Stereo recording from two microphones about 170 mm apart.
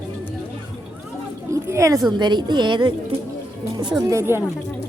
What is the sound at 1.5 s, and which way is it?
A woman's voice, 15° right (ahead or behind).